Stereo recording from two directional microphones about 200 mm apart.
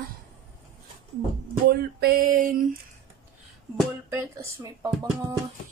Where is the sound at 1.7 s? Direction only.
50° right (ahead or behind).